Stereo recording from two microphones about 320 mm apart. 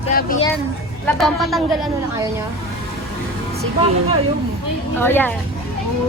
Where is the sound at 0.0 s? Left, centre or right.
Left.